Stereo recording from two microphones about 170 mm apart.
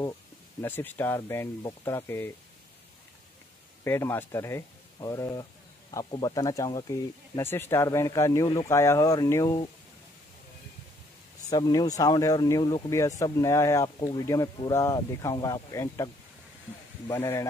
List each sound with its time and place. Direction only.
0.6 s speech: 10° left (ahead or behind)
3.8 s speech: 15° left (ahead or behind)
11.5 s speech: 25° left (ahead or behind)
17.1 s speech: 15° left (ahead or behind)